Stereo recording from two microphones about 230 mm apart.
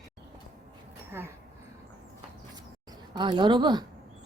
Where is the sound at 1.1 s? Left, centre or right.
Centre.